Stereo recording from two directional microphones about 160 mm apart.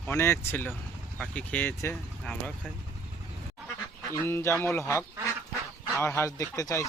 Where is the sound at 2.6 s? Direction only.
5° right (ahead or behind).